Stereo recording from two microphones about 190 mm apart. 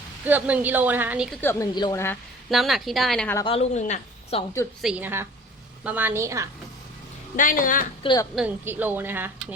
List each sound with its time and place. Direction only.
0.3 s speech: 10° right (ahead or behind)
1.4 s speech: 10° left (ahead or behind)
2.5 s speech: centre (ahead or behind)
3.3 s a woman's voice: 30° left (ahead or behind)
4.8 s speech: 5° right (ahead or behind)
7.3 s a woman's voice: 45° left (ahead or behind)
8.0 s speech: 20° left (ahead or behind)
8.4 s speech: 10° right (ahead or behind)